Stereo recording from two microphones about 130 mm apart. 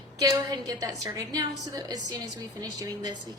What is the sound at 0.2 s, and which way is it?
A woman's voice, 25° right (ahead or behind).